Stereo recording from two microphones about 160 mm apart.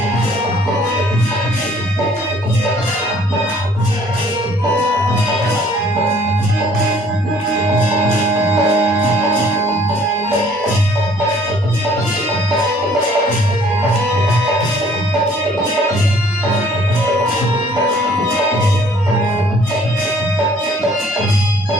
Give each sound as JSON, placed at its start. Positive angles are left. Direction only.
{"t": 8.4, "sound": "music", "side_deg": -15}